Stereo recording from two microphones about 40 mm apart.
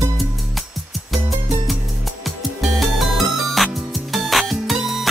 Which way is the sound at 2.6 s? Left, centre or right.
Centre.